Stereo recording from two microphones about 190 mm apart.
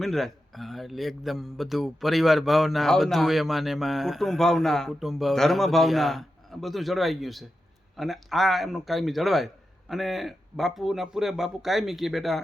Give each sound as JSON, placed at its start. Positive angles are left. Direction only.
{"t": 0.0, "sound": "speech", "side_deg": 0}